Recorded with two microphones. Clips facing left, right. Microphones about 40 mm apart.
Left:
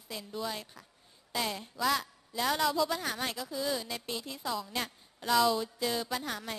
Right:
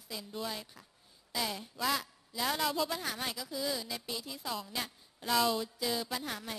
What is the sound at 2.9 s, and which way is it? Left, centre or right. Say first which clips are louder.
A woman's voice: left 3 dB; centre.